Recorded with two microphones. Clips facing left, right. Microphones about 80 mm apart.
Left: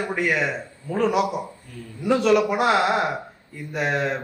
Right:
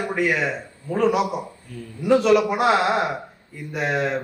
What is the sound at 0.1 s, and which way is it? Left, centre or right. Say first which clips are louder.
A man's voice: right 2 dB; centre.